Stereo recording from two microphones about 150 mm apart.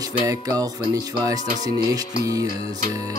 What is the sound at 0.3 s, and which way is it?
Music, 25° right (ahead or behind).